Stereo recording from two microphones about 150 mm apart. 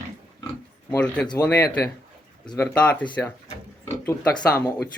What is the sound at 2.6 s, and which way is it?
Speech, 10° left (ahead or behind).